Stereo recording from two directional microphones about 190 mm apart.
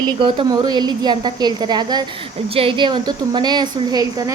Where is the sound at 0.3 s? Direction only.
20° right (ahead or behind).